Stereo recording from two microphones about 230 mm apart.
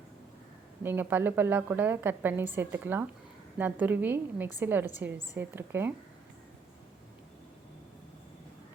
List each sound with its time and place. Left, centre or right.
0.8 s a woman's voice: centre